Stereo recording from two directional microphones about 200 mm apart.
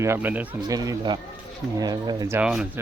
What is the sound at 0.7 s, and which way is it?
Speech, 20° right (ahead or behind).